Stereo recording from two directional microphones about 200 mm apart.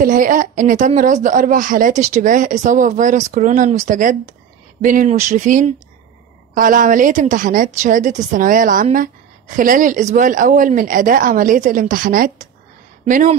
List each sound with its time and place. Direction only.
0.0 s a woman's voice: 40° right (ahead or behind)